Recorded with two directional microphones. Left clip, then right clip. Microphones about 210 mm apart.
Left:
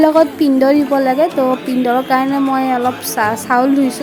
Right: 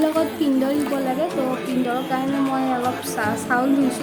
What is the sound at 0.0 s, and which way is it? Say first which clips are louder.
A woman's voice: left 10 dB; 40° left (ahead or behind).